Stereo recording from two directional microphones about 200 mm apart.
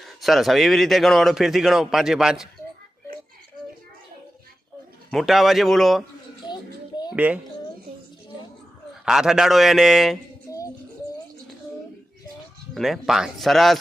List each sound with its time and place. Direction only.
0.0 s a man's voice: centre (ahead or behind)
5.1 s a man's voice: centre (ahead or behind)
6.5 s child singing: 20° left (ahead or behind)
9.0 s a man's voice: 5° right (ahead or behind)
10.5 s music: 15° left (ahead or behind)
12.7 s a man's voice: centre (ahead or behind)